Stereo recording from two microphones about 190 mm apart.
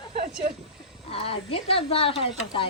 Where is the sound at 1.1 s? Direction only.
30° left (ahead or behind).